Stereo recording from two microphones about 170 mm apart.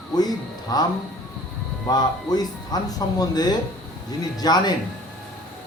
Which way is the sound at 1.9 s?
25° left (ahead or behind).